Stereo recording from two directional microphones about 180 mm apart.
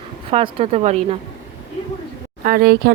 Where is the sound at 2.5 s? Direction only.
60° right (ahead or behind).